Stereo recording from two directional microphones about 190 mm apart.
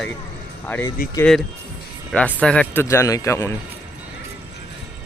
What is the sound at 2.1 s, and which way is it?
Speech, 5° left (ahead or behind).